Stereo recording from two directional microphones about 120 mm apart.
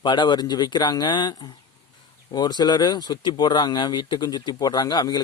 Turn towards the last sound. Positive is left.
turn(degrees=35)  # may be behind; listen again after turning